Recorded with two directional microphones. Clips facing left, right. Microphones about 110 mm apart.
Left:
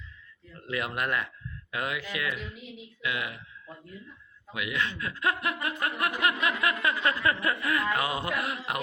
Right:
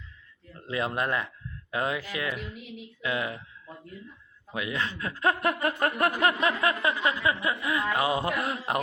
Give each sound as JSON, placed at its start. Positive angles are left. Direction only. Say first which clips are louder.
{"t": 0.7, "sound": "speech", "louder": "right 2 dB", "side_deg": -30}
{"t": 4.5, "sound": "speech", "louder": "even", "side_deg": -35}